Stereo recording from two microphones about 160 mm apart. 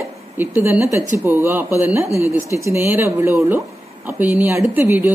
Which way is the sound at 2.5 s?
15° right (ahead or behind).